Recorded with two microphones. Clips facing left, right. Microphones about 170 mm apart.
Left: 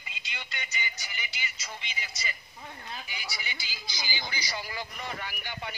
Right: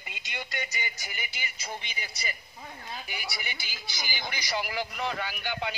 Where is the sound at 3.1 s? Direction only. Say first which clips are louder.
Right 2 dB; 55° right (ahead or behind).